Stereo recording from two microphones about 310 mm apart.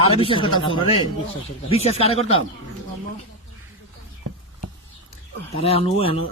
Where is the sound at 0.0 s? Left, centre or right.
Centre.